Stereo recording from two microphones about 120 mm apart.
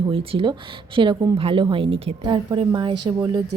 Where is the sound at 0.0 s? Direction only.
45° right (ahead or behind).